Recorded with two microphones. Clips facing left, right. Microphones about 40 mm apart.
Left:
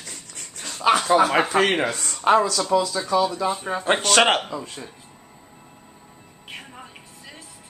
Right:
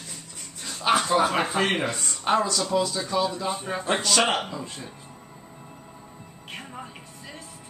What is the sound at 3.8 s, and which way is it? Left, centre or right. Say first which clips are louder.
Speech: left 5 dB; left.